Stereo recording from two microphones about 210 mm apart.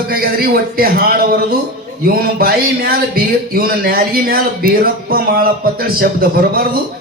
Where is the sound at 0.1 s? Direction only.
45° right (ahead or behind).